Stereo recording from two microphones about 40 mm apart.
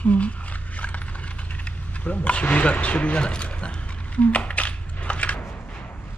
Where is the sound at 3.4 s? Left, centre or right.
Left.